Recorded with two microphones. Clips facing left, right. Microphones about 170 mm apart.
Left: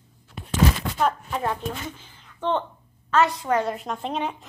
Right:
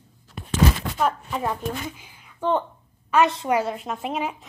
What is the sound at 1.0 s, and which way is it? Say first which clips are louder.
A woman's voice: even; 5° right (ahead or behind).